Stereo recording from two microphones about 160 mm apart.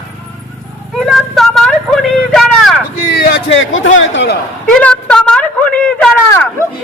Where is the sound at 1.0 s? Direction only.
Centre (ahead or behind).